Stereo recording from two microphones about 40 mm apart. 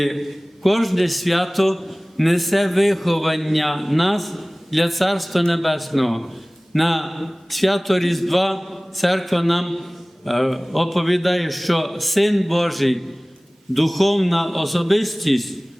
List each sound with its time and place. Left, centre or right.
0.0 s a man's voice: centre